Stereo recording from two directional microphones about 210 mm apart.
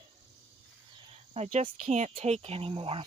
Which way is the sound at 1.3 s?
30° right (ahead or behind).